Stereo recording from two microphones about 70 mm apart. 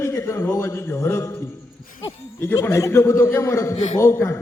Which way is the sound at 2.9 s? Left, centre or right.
Left.